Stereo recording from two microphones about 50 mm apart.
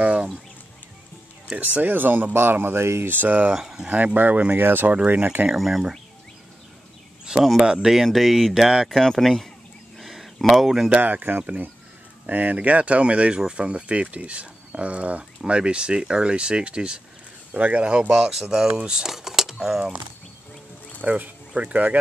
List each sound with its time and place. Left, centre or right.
0.0 s a sound: right
1.6 s speech: right
3.1 s speech: right
3.5 s speech: centre
3.9 s speech: right
5.5 s speech: centre
7.6 s speech: centre
9.0 s speech: centre
9.9 s a sound: centre
10.9 s speech: right
18.1 s speech: centre
21.0 s speech: right